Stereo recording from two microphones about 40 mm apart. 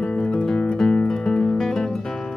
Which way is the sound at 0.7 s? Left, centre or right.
Centre.